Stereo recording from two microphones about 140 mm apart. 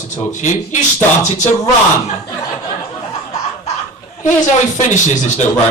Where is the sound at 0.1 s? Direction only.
60° left (ahead or behind).